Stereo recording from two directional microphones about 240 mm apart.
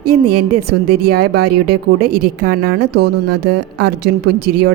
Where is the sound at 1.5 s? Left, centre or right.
Right.